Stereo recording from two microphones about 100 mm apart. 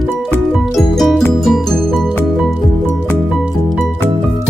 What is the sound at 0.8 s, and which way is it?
Music, 5° left (ahead or behind).